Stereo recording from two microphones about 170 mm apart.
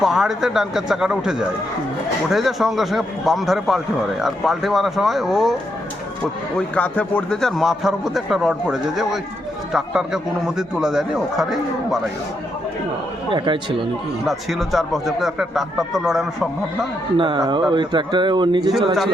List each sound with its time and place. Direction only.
0.0 s a man's voice: centre (ahead or behind)
6.6 s a man's voice: 10° left (ahead or behind)
13.3 s speech: 30° right (ahead or behind)
14.3 s a man's voice: centre (ahead or behind)
17.2 s speech: 25° right (ahead or behind)